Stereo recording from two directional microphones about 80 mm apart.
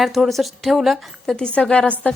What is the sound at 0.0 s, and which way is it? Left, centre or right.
A woman's voice, centre.